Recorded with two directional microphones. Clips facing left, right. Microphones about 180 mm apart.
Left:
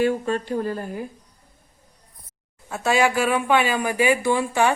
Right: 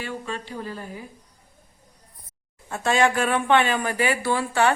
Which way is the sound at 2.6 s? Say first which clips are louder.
Left 1 dB; 5° left (ahead or behind).